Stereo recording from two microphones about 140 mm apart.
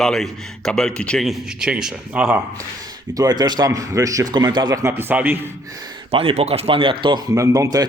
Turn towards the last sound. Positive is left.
turn(degrees=-25)  # may be behind; listen again after turning